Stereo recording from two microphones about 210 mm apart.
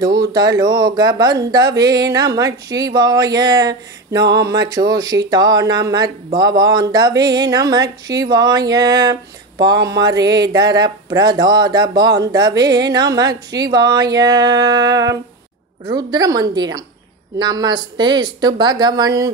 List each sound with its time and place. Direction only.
0.2 s speech: 20° right (ahead or behind)